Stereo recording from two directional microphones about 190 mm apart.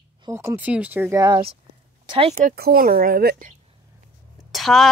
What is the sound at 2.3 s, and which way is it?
Speech, 50° right (ahead or behind).